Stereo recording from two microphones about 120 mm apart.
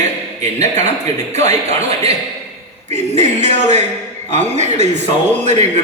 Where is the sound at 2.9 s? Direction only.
65° right (ahead or behind).